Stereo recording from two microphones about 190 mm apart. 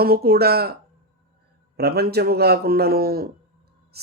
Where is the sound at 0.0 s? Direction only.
50° right (ahead or behind).